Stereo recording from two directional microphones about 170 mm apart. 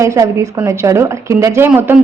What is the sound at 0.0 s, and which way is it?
A woman's voice, 15° right (ahead or behind).